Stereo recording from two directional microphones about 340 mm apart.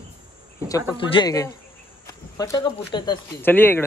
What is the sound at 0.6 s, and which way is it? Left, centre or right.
Speech, centre.